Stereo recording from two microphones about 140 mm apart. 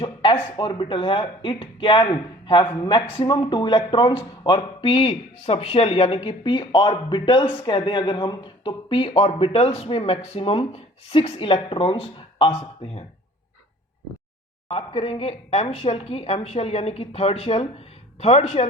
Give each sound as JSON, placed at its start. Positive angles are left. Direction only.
{"t": 0.0, "sound": "a sound", "side_deg": 35}
{"t": 0.5, "sound": "a man's voice", "side_deg": 35}
{"t": 14.7, "sound": "a woman's voice", "side_deg": 45}